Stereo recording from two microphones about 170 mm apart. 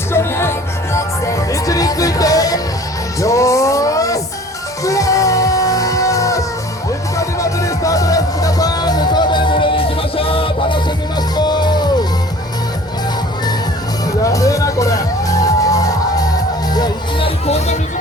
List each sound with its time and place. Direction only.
0.1 s music: 15° left (ahead or behind)
14.3 s music: 20° left (ahead or behind); by 17.7 s 40° left (ahead or behind)